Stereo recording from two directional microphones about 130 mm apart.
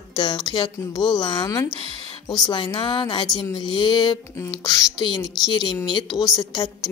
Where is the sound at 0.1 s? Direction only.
35° left (ahead or behind).